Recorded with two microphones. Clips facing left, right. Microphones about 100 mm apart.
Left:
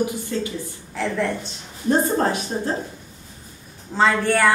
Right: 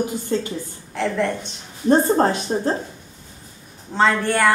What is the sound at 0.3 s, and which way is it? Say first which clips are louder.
Speech: right 3 dB; 30° right (ahead or behind).